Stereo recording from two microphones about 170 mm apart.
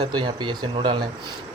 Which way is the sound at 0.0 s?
25° right (ahead or behind).